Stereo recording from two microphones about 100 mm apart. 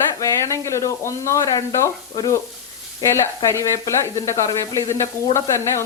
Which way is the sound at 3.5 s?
30° left (ahead or behind).